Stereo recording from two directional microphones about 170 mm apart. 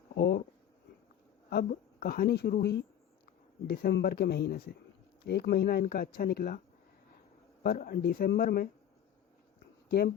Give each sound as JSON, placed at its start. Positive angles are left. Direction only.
{"t": 0.2, "sound": "a woman's voice", "side_deg": 70}
{"t": 1.5, "sound": "a woman's voice", "side_deg": 65}
{"t": 7.6, "sound": "speech", "side_deg": 60}